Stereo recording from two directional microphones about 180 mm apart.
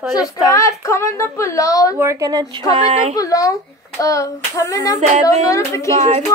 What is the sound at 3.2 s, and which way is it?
Hands, 20° left (ahead or behind).